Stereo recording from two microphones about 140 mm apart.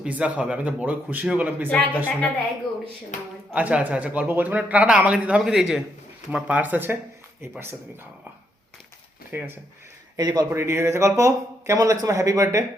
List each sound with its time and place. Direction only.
0.0 s a man's voice: 10° right (ahead or behind)
1.7 s a woman's voice: 10° left (ahead or behind)
3.5 s a man's voice: 10° right (ahead or behind)
9.3 s a man's voice: 10° right (ahead or behind)
10.2 s speech: 30° right (ahead or behind)